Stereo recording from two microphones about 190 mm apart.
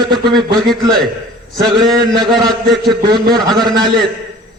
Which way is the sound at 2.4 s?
Centre (ahead or behind).